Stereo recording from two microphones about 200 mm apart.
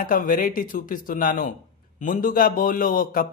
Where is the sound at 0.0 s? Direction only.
45° left (ahead or behind).